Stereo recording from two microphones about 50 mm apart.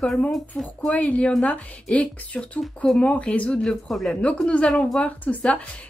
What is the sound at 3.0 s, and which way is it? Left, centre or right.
Speech, left.